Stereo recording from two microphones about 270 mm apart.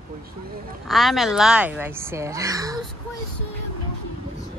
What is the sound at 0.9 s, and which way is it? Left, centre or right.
Speech, centre.